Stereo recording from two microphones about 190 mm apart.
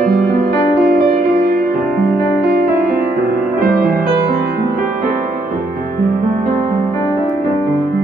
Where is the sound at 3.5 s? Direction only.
50° right (ahead or behind).